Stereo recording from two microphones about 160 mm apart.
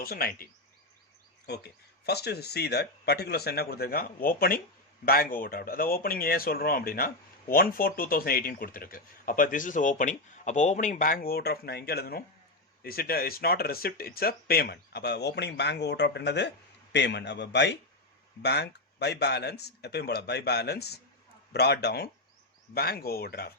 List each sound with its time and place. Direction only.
0.0 s speech: 70° left (ahead or behind)
1.5 s speech: 90° left
22.7 s speech: 75° left (ahead or behind)